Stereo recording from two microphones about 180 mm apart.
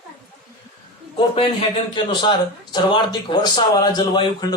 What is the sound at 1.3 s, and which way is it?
A man's voice, 25° left (ahead or behind).